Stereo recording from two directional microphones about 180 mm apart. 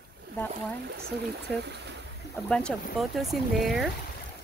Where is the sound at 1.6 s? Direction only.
70° right (ahead or behind).